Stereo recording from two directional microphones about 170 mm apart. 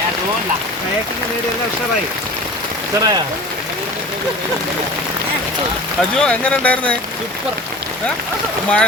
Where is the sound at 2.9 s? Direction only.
15° right (ahead or behind).